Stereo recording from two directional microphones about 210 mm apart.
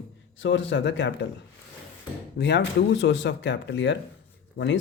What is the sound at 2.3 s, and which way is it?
Speech, 55° left (ahead or behind).